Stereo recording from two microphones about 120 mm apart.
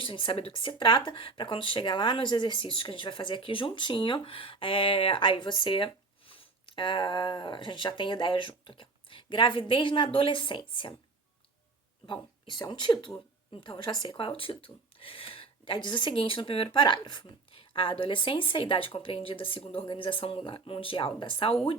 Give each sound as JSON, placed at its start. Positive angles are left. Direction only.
{"t": 0.0, "sound": "speech", "side_deg": 45}
{"t": 12.0, "sound": "speech", "side_deg": 40}